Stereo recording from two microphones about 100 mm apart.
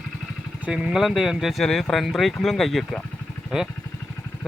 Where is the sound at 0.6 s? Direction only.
10° right (ahead or behind).